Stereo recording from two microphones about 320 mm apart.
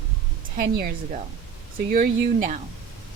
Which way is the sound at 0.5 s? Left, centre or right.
Right.